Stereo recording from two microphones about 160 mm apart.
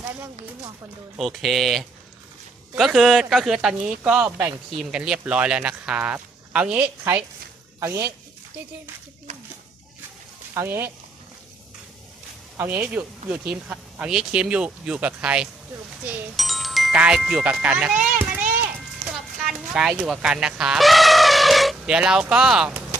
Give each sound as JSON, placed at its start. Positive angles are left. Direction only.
{"t": 1.2, "sound": "speech", "side_deg": 0}
{"t": 10.5, "sound": "speech", "side_deg": -15}
{"t": 12.5, "sound": "speech", "side_deg": -10}
{"t": 18.2, "sound": "a sound", "side_deg": -10}
{"t": 19.1, "sound": "speech", "side_deg": 0}